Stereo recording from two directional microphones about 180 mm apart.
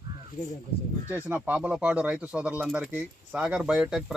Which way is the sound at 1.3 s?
10° right (ahead or behind).